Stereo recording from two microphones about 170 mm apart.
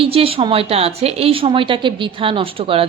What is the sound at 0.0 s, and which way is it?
A woman's voice, 35° right (ahead or behind).